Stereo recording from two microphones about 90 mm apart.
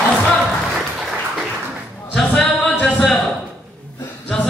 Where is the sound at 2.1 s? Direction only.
5° left (ahead or behind).